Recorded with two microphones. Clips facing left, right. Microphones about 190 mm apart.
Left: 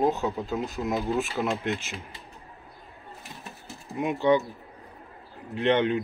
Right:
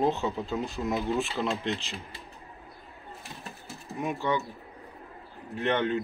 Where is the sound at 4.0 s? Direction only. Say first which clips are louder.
Left 7 dB; 20° left (ahead or behind).